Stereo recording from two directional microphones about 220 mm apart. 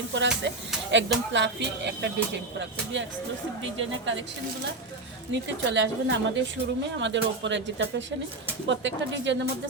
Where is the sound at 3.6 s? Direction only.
60° right (ahead or behind).